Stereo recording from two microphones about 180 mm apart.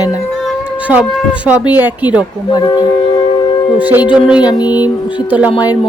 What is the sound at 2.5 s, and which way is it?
Speech, 20° left (ahead or behind).